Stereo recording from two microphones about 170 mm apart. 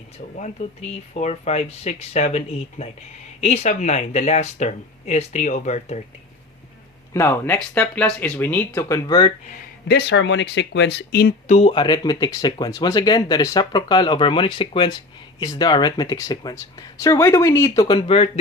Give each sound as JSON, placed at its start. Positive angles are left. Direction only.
{"t": 0.3, "sound": "speech", "side_deg": 45}
{"t": 7.1, "sound": "speech", "side_deg": 15}
{"t": 9.9, "sound": "speech", "side_deg": 85}
{"t": 11.4, "sound": "speech", "side_deg": 40}